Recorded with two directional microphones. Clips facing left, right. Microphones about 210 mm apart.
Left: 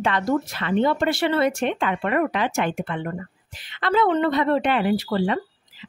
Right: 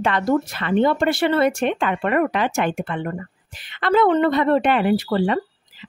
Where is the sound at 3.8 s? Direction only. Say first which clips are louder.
Right 3 dB; 55° right (ahead or behind).